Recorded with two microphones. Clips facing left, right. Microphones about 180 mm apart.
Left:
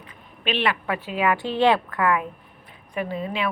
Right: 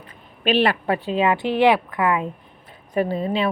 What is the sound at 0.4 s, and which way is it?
Speech, 40° right (ahead or behind).